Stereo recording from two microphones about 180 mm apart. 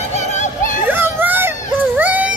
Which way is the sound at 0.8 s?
10° right (ahead or behind).